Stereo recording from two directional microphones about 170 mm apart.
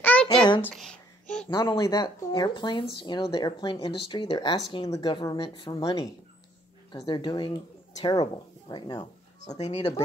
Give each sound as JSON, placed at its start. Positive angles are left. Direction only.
{"t": 0.0, "sound": "a sound", "side_deg": 10}
{"t": 0.7, "sound": "babbling", "side_deg": 0}
{"t": 1.5, "sound": "speech", "side_deg": 25}
{"t": 9.5, "sound": "speech", "side_deg": 40}
{"t": 9.8, "sound": "speech", "side_deg": 25}